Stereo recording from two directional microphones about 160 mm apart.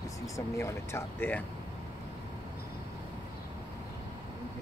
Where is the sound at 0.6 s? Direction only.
15° left (ahead or behind).